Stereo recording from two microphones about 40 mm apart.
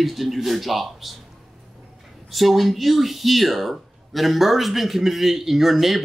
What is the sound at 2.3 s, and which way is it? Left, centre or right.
Speech, centre.